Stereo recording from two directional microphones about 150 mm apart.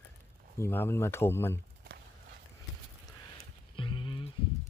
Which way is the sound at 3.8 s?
35° left (ahead or behind).